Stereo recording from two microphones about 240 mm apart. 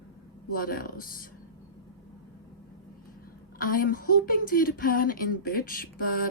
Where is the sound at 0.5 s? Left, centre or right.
Left.